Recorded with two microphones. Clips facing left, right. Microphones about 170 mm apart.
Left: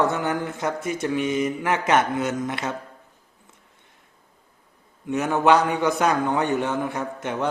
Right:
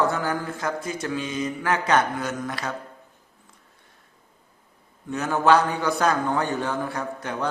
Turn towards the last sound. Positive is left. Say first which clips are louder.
# left 2 dB
turn(degrees=20)  # may be behind; listen again after turning